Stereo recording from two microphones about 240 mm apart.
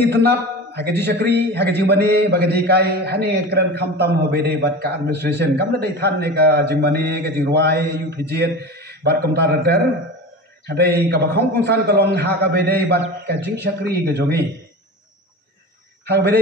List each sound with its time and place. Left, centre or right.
0.0 s a man's voice: centre
1.0 s a man's voice: right
16.1 s a man's voice: right